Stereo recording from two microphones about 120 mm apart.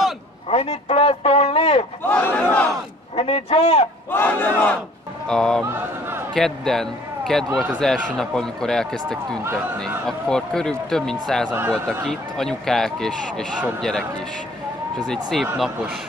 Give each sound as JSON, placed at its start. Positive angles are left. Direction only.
{"t": 0.5, "sound": "a man's voice", "side_deg": 55}
{"t": 2.0, "sound": "battle cry", "side_deg": 15}
{"t": 3.2, "sound": "a man's voice", "side_deg": 55}
{"t": 4.1, "sound": "battle cry", "side_deg": 15}
{"t": 5.3, "sound": "speech", "side_deg": 5}
{"t": 15.4, "sound": "speech", "side_deg": -10}